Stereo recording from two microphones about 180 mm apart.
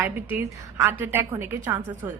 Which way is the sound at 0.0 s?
10° right (ahead or behind).